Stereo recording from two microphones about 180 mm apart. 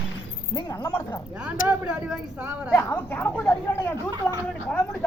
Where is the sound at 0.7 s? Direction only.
15° left (ahead or behind).